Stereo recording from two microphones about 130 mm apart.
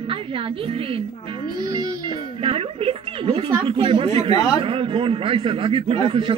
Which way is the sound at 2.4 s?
45° right (ahead or behind).